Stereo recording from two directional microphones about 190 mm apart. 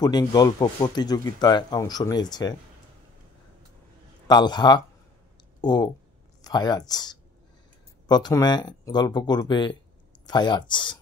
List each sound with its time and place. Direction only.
0.0 s speech: 20° left (ahead or behind)
4.3 s speech: 25° left (ahead or behind)